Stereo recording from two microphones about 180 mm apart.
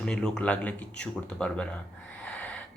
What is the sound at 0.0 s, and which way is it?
Speech, 5° left (ahead or behind).